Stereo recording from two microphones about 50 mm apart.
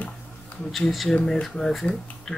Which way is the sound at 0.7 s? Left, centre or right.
Centre.